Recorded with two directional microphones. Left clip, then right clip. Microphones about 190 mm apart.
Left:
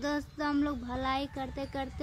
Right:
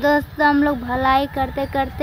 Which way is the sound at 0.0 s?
20° left (ahead or behind).